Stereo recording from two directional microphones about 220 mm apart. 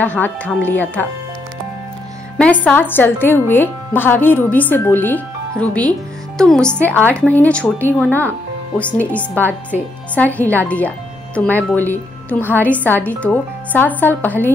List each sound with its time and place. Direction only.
0.0 s a woman's voice: 5° left (ahead or behind)
2.3 s a woman's voice: 5° left (ahead or behind)